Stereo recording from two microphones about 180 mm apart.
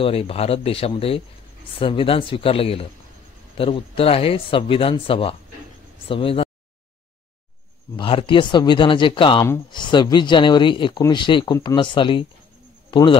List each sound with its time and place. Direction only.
0.0 s speech: 30° left (ahead or behind)
7.9 s speech: 30° left (ahead or behind)